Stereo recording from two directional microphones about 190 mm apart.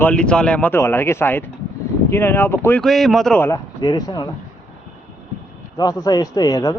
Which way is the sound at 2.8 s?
Centre (ahead or behind).